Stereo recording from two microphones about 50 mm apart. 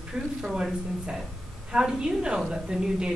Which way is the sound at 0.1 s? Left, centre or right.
Centre.